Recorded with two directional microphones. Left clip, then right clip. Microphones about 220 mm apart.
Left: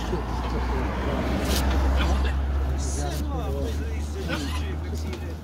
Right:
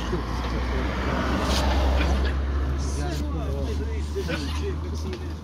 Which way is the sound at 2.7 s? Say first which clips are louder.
Left 2 dB; 20° left (ahead or behind).